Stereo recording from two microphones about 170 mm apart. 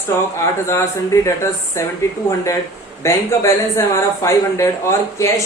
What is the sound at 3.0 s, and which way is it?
Speech, 15° left (ahead or behind).